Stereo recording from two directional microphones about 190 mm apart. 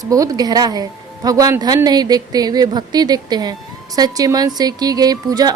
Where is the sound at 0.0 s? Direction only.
20° right (ahead or behind).